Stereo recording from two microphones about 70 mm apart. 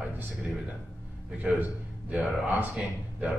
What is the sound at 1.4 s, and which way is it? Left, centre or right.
A man's voice, centre.